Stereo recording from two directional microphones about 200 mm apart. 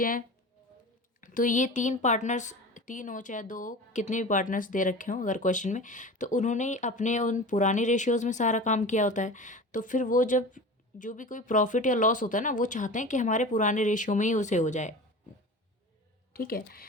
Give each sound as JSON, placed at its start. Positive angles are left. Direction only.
{"t": 0.0, "sound": "a woman's voice", "side_deg": 45}
{"t": 16.3, "sound": "speech", "side_deg": 50}